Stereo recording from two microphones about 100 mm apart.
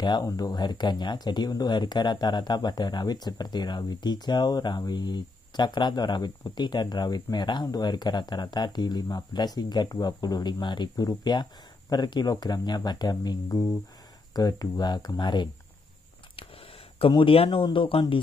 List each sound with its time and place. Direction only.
0.2 s speech: 35° left (ahead or behind)
0.5 s speech: 50° left (ahead or behind)
16.3 s a sound: 65° left (ahead or behind)
17.1 s speech: 65° left (ahead or behind)